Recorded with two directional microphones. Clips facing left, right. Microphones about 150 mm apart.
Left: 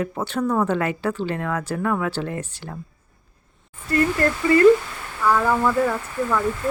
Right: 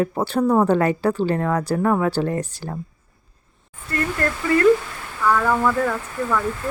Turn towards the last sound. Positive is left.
turn(degrees=10)  # may be behind; listen again after turning